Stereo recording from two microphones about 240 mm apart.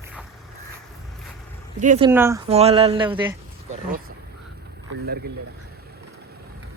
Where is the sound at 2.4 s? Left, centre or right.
Right.